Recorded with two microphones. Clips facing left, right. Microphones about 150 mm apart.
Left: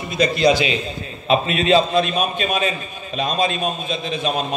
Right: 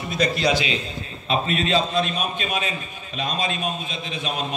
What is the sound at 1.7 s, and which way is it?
Speech, 70° left (ahead or behind).